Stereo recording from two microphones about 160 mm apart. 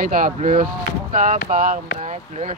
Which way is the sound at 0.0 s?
60° right (ahead or behind).